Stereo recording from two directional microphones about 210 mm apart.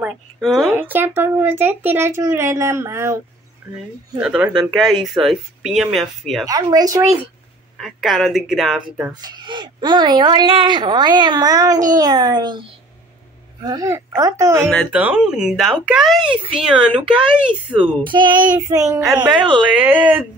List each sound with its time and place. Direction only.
0.0 s speech: centre (ahead or behind)
4.2 s speech: 5° right (ahead or behind)
6.4 s speech: 15° right (ahead or behind)
7.7 s speech: centre (ahead or behind)
9.2 s speech: 20° right (ahead or behind)
13.7 s speech: 15° right (ahead or behind)
14.7 s speech: 5° left (ahead or behind)
18.0 s speech: 20° right (ahead or behind)